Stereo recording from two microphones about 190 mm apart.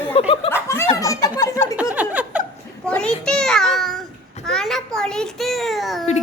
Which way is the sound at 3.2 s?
5° left (ahead or behind).